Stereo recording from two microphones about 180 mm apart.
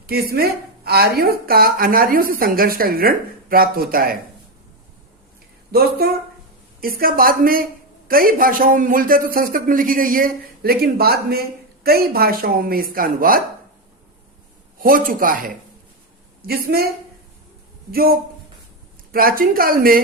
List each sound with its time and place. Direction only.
0.1 s a woman's voice: 60° right (ahead or behind)
5.7 s a woman's voice: 60° right (ahead or behind)
14.8 s a woman's voice: 50° right (ahead or behind)
17.9 s a woman's voice: 55° right (ahead or behind)